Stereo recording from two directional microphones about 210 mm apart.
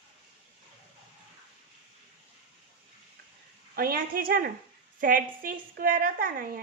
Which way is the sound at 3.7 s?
45° right (ahead or behind).